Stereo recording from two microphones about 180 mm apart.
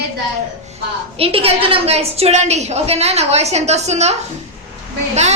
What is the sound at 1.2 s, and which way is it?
A woman's voice, 30° right (ahead or behind).